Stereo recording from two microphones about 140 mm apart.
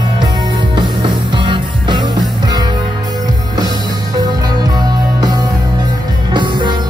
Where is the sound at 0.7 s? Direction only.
35° right (ahead or behind).